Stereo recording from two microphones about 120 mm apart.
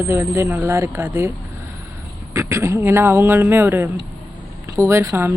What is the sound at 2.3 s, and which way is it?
Speech, 25° right (ahead or behind).